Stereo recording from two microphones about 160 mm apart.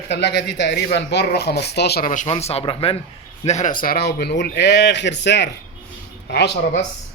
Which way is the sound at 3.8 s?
75° left (ahead or behind).